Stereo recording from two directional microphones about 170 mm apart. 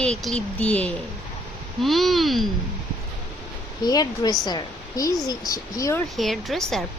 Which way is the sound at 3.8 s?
25° left (ahead or behind).